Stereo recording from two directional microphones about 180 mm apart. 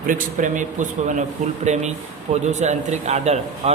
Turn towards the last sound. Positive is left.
turn(degrees=-35)  # may be behind; listen again after turning